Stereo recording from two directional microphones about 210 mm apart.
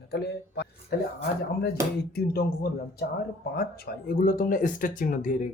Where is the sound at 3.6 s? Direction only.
45° left (ahead or behind).